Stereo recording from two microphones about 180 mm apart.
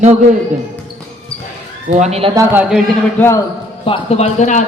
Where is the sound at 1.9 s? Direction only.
40° right (ahead or behind).